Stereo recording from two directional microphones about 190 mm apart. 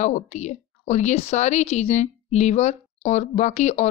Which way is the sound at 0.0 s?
40° left (ahead or behind).